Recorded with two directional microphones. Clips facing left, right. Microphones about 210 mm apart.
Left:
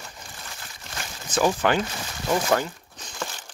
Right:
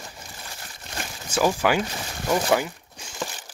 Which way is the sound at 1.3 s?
10° right (ahead or behind).